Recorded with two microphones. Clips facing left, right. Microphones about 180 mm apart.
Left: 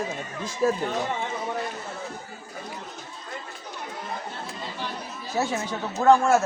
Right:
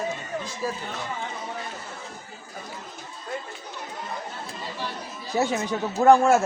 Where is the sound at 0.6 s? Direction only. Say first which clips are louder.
Left 9 dB; 55° left (ahead or behind).